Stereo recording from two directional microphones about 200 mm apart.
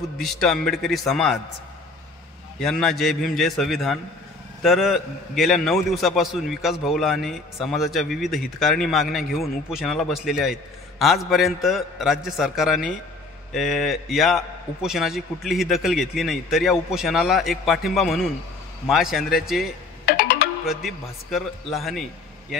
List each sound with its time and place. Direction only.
0.2 s a man's voice: centre (ahead or behind)
2.6 s a man's voice: centre (ahead or behind)
20.1 s music: 50° left (ahead or behind)
20.6 s a man's voice: centre (ahead or behind)